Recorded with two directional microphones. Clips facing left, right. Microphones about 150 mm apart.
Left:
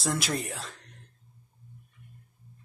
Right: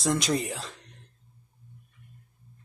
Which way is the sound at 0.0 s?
Centre (ahead or behind).